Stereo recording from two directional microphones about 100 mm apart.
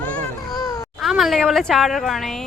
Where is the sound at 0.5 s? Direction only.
40° left (ahead or behind).